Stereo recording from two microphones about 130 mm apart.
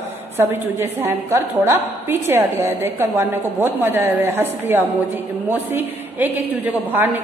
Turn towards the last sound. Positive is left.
turn(degrees=-15)  # may be behind; listen again after turning